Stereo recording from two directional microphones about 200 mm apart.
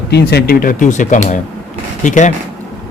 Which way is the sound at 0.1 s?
55° left (ahead or behind).